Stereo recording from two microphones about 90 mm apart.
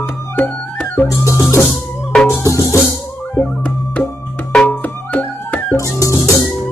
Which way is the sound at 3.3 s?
20° left (ahead or behind).